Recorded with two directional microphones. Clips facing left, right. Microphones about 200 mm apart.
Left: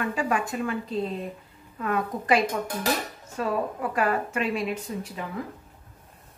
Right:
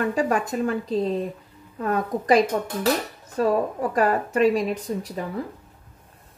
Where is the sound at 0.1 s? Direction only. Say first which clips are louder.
Right 4 dB; 40° right (ahead or behind).